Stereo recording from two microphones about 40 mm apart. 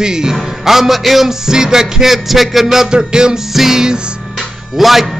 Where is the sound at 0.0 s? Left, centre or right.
Centre.